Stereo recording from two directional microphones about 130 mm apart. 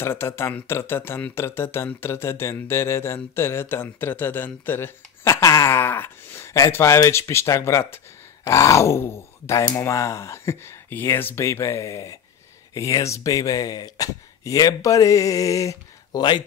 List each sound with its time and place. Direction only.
0.0 s speech: 20° left (ahead or behind); by 16.4 s 35° left (ahead or behind)